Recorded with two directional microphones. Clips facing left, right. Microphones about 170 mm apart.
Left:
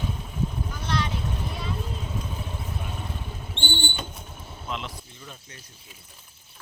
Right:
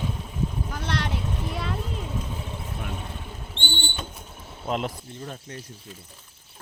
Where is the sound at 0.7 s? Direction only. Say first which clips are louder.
Even; 75° right (ahead or behind).